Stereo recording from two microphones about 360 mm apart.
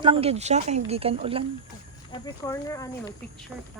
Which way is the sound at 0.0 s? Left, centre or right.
Centre.